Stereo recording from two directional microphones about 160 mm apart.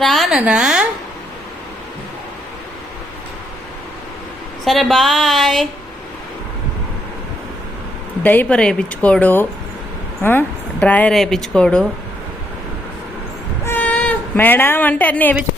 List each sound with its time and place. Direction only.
0.0 s a woman's voice: centre (ahead or behind)
4.6 s a woman's voice: centre (ahead or behind)
8.2 s a woman's voice: 10° left (ahead or behind)
13.7 s speech: 10° left (ahead or behind)